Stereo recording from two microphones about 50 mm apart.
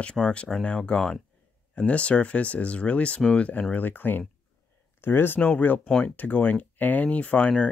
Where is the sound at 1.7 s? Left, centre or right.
Left.